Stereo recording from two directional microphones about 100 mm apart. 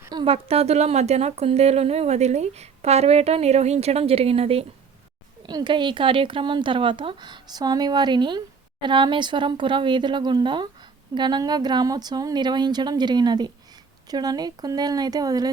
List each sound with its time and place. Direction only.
0.3 s speech: 85° right
5.5 s speech: 45° right (ahead or behind)